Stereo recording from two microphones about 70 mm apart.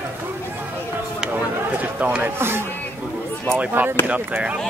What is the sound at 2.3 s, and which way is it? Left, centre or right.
Speech, right.